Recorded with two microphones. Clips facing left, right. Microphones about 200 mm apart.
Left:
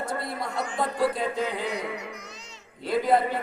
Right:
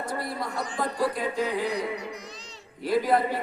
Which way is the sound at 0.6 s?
35° right (ahead or behind).